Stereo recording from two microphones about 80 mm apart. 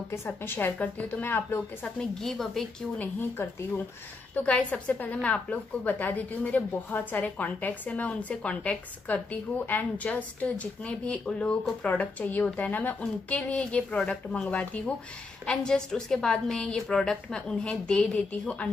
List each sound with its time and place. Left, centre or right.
0.1 s a woman's voice: left
2.0 s a woman's voice: centre
3.0 s a woman's voice: left